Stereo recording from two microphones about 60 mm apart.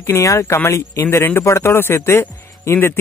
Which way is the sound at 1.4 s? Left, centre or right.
Left.